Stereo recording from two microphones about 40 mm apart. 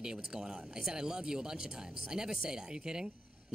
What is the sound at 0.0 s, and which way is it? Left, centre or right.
Speech, centre.